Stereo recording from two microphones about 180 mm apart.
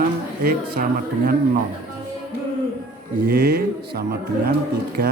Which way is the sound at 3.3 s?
60° right (ahead or behind).